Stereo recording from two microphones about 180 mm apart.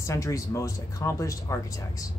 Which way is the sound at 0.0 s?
15° left (ahead or behind).